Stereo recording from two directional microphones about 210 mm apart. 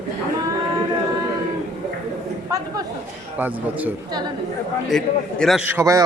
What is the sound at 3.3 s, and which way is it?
Speech, 10° right (ahead or behind).